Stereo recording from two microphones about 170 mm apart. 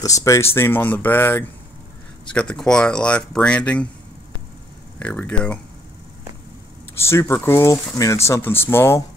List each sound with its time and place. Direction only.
0.0 s speech: 20° left (ahead or behind)
4.9 s speech: 10° left (ahead or behind)
7.0 s speech: 15° left (ahead or behind)